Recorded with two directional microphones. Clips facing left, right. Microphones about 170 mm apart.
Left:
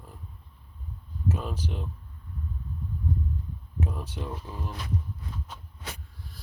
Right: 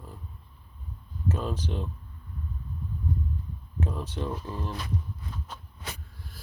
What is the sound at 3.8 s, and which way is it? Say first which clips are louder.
Speech: right 2 dB; 5° left (ahead or behind).